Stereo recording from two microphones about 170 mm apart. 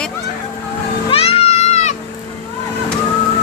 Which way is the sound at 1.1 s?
35° left (ahead or behind).